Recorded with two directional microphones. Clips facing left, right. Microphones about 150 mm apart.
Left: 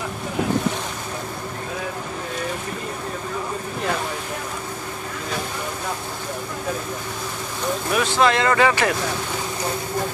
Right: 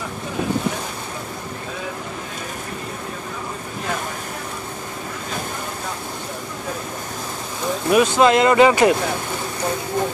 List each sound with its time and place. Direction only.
7.9 s speech: 20° right (ahead or behind)